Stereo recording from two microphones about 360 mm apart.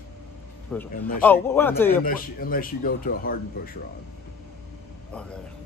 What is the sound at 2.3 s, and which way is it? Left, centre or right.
A man's voice, left.